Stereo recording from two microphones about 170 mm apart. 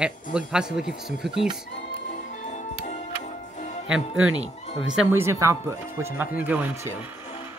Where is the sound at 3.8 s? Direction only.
5° right (ahead or behind).